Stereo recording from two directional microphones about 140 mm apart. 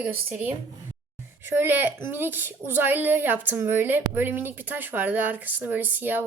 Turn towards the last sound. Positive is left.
turn(degrees=-15)  # may be behind; listen again after turning